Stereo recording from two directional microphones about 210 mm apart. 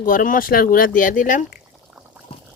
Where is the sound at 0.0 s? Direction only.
40° left (ahead or behind).